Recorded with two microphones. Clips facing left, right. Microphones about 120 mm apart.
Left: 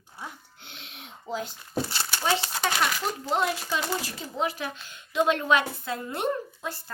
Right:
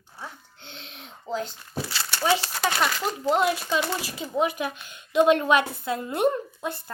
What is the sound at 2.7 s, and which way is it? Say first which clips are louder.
Speech: right 2 dB; 5° right (ahead or behind).